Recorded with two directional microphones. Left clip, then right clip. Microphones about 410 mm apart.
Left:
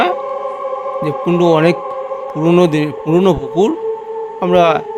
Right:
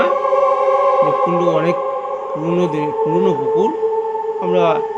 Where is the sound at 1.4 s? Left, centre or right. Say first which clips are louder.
Left 4 dB; left.